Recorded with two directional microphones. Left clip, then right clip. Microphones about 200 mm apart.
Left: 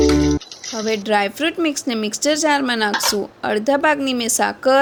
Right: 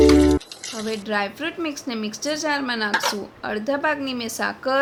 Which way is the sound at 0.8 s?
35° left (ahead or behind).